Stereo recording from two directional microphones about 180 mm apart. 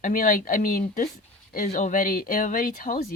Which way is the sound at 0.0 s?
50° left (ahead or behind).